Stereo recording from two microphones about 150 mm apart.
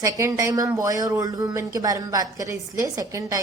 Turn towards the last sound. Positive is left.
turn(degrees=-20)  # may be behind; listen again after turning